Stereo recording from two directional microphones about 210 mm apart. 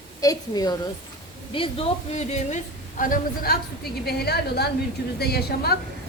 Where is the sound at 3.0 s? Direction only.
40° left (ahead or behind).